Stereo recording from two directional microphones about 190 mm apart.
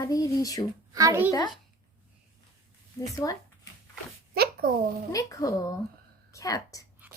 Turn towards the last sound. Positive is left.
turn(degrees=15)  # may be behind; listen again after turning